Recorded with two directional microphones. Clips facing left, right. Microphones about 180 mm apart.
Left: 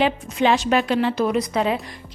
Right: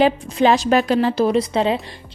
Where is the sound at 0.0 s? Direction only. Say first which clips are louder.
Right 4 dB; 40° right (ahead or behind).